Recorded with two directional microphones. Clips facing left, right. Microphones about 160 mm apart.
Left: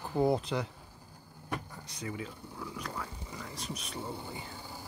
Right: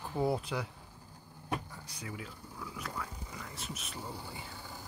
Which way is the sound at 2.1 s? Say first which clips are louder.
Left 5 dB; centre (ahead or behind).